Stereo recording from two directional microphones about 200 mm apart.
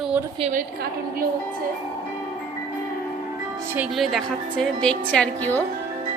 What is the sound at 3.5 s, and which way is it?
Speech, 10° right (ahead or behind).